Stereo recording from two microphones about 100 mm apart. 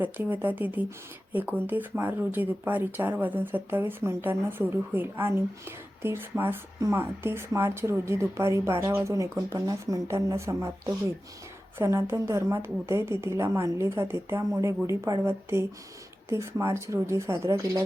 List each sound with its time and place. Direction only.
0.0 s speech: 15° right (ahead or behind); by 17.8 s 35° right (ahead or behind)